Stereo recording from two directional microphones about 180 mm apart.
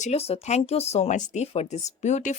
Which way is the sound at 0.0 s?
35° left (ahead or behind).